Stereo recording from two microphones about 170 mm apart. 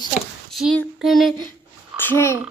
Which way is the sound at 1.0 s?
Centre (ahead or behind).